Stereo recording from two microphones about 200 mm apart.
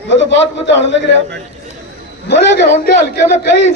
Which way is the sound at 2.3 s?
55° left (ahead or behind).